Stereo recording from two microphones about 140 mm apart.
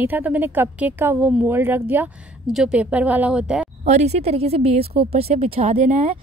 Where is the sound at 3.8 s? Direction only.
55° right (ahead or behind).